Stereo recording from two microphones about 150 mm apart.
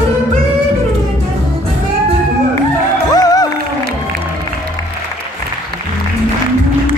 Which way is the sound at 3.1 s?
25° left (ahead or behind).